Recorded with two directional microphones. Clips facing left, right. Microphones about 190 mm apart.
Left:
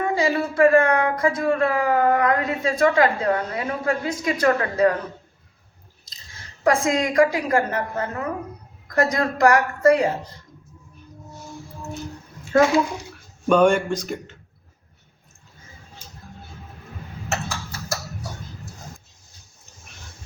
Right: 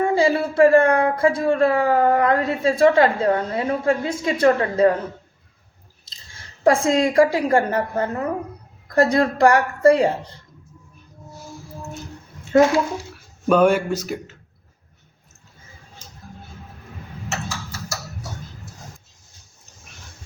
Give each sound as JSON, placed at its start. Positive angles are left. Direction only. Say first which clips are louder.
{"t": 0.0, "sound": "speech", "louder": "right 3 dB", "side_deg": -30}
{"t": 6.7, "sound": "a woman's voice", "louder": "right 3 dB", "side_deg": -30}
{"t": 13.5, "sound": "speech", "louder": "right 1 dB", "side_deg": -5}
{"t": 17.2, "sound": "a sound", "louder": "left 1 dB", "side_deg": 55}